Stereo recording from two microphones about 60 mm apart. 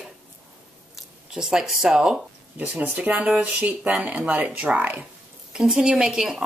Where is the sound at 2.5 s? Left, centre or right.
Right.